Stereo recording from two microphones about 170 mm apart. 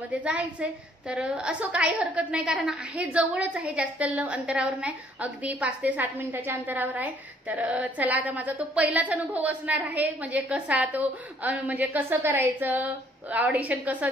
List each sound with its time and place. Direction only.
0.1 s a woman's voice: 10° right (ahead or behind)